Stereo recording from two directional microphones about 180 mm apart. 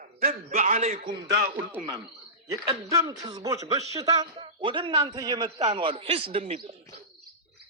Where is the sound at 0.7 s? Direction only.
35° right (ahead or behind).